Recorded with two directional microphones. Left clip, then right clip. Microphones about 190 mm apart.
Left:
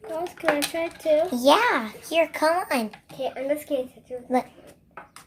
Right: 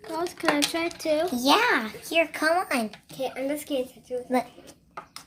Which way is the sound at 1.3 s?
15° left (ahead or behind).